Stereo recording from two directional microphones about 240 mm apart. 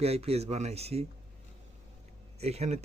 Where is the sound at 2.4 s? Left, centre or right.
Right.